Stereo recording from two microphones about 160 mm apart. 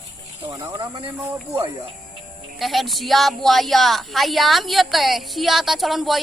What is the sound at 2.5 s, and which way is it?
A woman's voice, centre (ahead or behind).